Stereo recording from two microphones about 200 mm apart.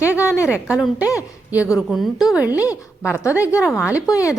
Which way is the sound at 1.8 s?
Centre (ahead or behind).